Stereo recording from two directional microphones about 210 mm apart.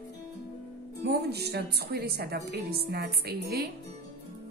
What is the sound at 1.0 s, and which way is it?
Speech, 50° right (ahead or behind).